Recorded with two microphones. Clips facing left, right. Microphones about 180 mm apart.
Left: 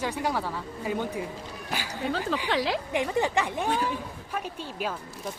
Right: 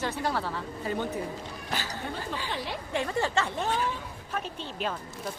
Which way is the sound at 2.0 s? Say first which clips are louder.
Left 6 dB; 90° left.